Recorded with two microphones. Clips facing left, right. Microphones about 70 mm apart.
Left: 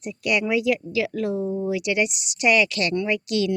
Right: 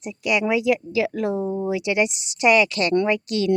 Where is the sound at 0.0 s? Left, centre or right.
Centre.